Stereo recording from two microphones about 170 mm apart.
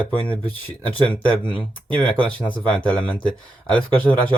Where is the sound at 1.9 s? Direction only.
5° left (ahead or behind).